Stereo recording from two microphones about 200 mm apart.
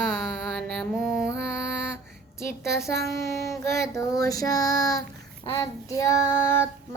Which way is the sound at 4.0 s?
15° left (ahead or behind).